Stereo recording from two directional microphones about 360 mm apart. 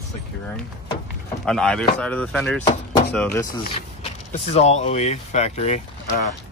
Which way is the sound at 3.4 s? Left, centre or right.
Left.